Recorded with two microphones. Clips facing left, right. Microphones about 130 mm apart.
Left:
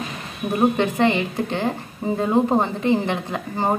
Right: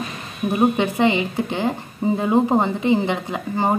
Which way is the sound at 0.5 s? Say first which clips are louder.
Even; 15° right (ahead or behind).